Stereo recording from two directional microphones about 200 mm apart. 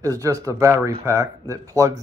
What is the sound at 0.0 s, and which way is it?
Speech, 15° right (ahead or behind).